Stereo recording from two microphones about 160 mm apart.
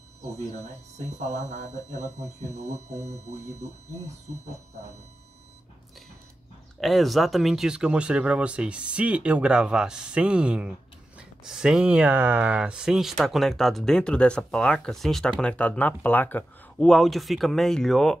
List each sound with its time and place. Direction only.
0.4 s speech: 45° right (ahead or behind)
6.8 s speech: centre (ahead or behind)